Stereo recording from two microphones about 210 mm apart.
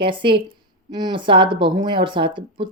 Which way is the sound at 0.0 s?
25° right (ahead or behind).